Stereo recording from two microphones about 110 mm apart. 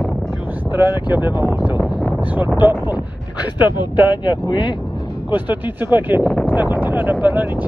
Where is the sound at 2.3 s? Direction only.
15° right (ahead or behind).